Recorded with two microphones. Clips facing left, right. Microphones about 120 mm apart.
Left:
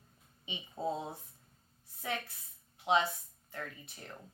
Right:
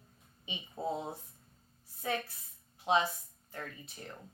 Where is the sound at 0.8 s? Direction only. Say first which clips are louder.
Left 1 dB; 25° right (ahead or behind).